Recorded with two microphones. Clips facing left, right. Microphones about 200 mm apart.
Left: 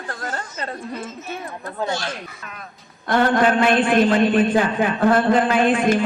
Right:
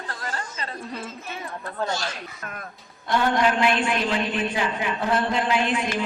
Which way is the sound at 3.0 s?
50° left (ahead or behind).